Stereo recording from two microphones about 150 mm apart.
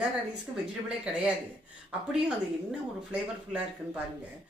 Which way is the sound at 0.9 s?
5° right (ahead or behind).